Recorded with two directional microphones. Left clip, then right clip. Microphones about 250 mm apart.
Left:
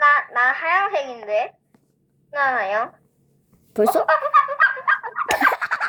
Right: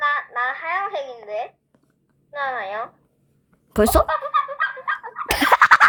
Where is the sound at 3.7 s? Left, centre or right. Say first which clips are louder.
Right 1 dB; right.